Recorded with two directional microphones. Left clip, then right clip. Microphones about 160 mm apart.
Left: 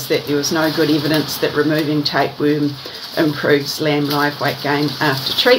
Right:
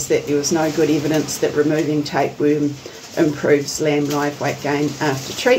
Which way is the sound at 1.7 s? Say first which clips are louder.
Left 2 dB; 15° right (ahead or behind).